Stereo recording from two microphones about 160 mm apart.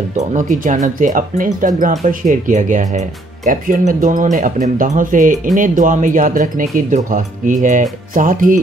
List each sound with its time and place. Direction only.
0.3 s speech: 50° right (ahead or behind)